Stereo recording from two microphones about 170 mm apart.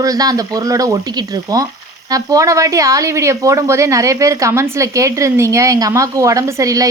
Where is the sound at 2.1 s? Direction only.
20° right (ahead or behind).